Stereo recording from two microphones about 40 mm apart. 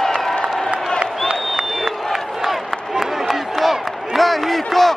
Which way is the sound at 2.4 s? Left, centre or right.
Centre.